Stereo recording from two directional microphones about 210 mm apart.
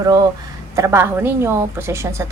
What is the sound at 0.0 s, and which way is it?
A woman's voice, 20° right (ahead or behind).